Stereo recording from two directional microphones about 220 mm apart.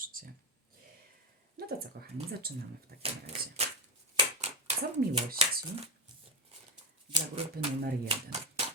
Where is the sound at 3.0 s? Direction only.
30° right (ahead or behind).